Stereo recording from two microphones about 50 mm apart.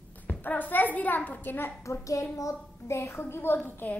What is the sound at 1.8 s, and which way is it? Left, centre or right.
A woman's voice, left.